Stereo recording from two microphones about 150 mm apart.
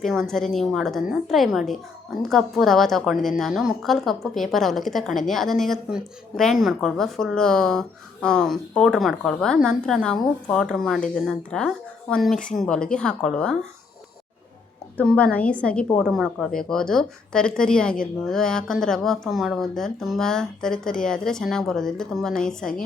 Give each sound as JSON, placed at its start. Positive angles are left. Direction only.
{"t": 0.0, "sound": "a woman's voice", "side_deg": 0}
{"t": 14.9, "sound": "a woman's voice", "side_deg": 10}